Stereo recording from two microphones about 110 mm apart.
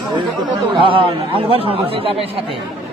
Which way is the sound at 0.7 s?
50° right (ahead or behind).